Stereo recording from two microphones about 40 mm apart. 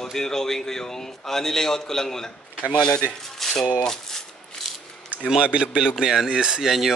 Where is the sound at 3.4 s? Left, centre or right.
Centre.